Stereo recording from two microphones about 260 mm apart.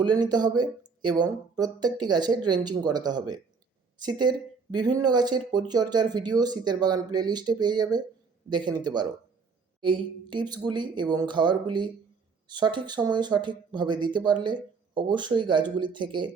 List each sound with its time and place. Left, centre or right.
0.0 s speech: centre